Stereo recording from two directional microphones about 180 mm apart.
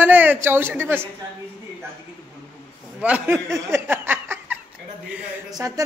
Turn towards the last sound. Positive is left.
turn(degrees=-20)  # may be behind; listen again after turning